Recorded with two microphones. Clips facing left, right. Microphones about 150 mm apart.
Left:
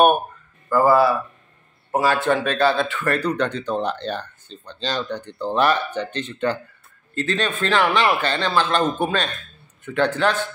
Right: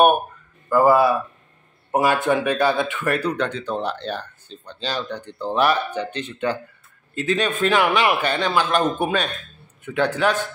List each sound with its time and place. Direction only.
0.7 s speech: 15° right (ahead or behind)